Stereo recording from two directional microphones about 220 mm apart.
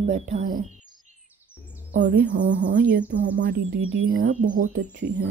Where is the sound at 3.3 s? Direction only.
55° right (ahead or behind).